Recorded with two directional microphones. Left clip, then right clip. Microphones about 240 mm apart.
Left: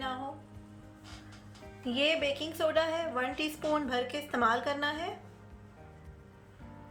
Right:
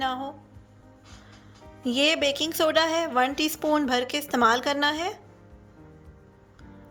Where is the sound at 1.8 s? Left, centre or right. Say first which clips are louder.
Right 7 dB; right.